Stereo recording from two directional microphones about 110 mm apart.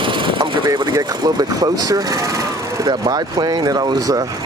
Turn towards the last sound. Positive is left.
turn(degrees=-35)  # may be behind; listen again after turning